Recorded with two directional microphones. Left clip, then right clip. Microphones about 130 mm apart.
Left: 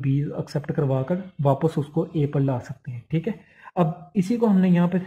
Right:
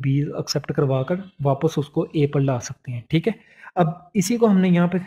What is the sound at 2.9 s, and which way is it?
Speech, 40° right (ahead or behind).